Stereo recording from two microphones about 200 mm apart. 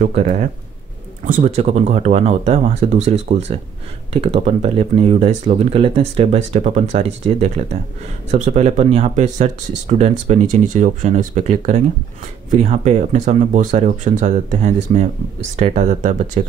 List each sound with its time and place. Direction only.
0.0 s speech: 40° right (ahead or behind)